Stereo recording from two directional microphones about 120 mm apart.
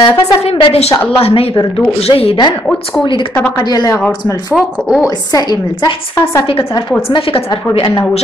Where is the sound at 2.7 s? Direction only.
10° left (ahead or behind).